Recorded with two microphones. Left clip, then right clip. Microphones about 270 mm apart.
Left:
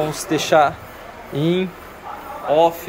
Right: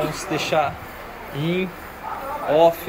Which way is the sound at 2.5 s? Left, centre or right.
Centre.